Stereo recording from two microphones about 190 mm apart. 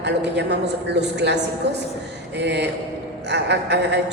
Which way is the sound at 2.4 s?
65° right (ahead or behind).